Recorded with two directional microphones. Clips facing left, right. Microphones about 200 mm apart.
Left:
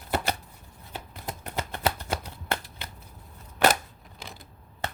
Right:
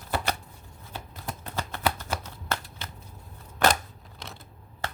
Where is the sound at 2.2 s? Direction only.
15° left (ahead or behind).